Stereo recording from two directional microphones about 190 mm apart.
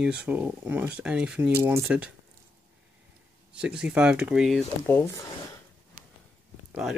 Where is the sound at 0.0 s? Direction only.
5° right (ahead or behind).